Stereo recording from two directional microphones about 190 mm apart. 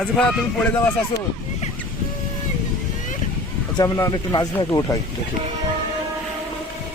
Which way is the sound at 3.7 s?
20° left (ahead or behind).